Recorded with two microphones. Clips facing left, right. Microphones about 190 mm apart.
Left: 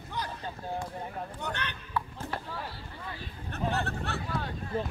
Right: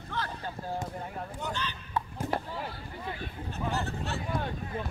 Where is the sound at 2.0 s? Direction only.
20° right (ahead or behind).